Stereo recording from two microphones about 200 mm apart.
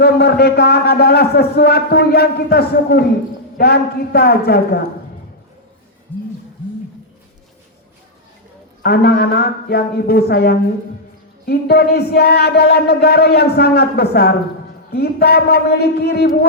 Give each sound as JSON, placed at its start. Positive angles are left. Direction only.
{"t": 0.0, "sound": "a man's voice", "side_deg": 55}
{"t": 6.1, "sound": "a sound", "side_deg": 10}
{"t": 8.8, "sound": "a man's voice", "side_deg": 55}